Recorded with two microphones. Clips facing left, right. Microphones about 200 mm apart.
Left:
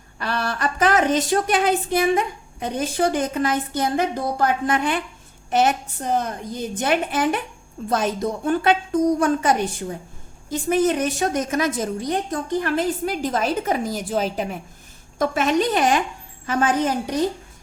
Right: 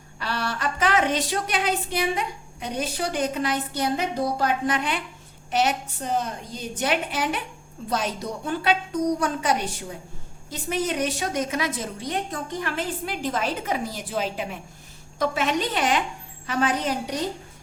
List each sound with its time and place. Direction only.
0.2 s a woman's voice: 50° left (ahead or behind)